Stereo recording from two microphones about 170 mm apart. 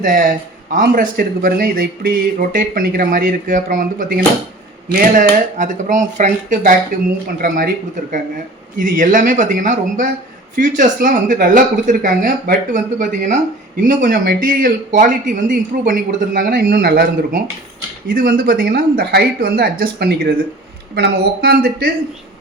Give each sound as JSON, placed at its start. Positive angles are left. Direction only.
{"t": 0.0, "sound": "speech", "side_deg": -55}
{"t": 8.8, "sound": "speech", "side_deg": -50}
{"t": 18.1, "sound": "speech", "side_deg": -55}